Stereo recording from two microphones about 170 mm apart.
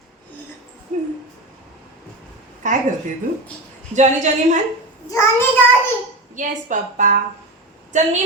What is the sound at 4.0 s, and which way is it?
Speech, 45° right (ahead or behind).